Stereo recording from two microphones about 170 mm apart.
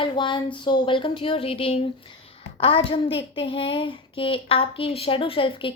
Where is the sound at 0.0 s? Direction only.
30° left (ahead or behind).